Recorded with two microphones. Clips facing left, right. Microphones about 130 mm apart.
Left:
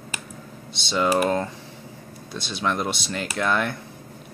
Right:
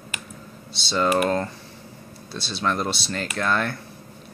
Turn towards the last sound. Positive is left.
turn(degrees=15)  # may be behind; listen again after turning